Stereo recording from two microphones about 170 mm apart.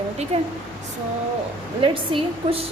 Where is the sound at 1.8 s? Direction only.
30° right (ahead or behind).